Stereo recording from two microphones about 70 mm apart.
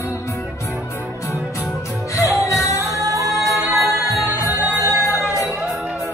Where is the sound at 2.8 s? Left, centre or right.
Right.